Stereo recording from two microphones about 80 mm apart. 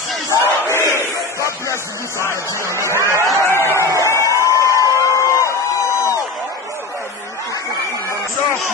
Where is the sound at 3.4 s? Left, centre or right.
Left.